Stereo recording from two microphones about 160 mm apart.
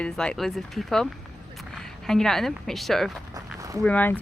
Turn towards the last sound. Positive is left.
turn(degrees=10)  # may be behind; listen again after turning